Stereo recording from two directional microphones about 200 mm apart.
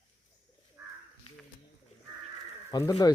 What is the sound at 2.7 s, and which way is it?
Speech, 20° left (ahead or behind).